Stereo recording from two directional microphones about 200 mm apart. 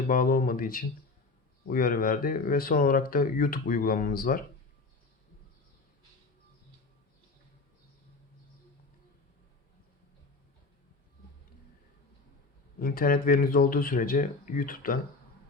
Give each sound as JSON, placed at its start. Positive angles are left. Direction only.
{"t": 0.1, "sound": "speech", "side_deg": 45}
{"t": 12.8, "sound": "speech", "side_deg": 45}